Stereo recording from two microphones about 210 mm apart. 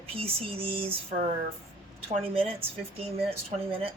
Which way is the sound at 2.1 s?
30° right (ahead or behind).